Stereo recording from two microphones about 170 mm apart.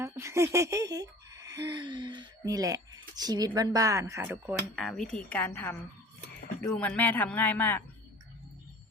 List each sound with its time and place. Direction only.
0.0 s speech: 15° right (ahead or behind)
4.7 s a woman's voice: centre (ahead or behind)
6.7 s speech: 10° left (ahead or behind)